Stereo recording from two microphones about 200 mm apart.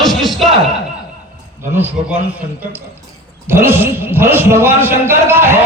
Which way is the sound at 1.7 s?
10° right (ahead or behind).